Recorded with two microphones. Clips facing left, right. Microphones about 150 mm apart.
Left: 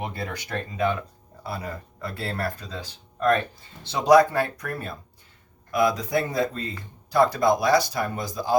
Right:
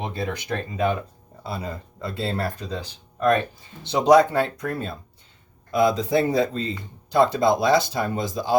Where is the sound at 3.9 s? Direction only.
20° right (ahead or behind).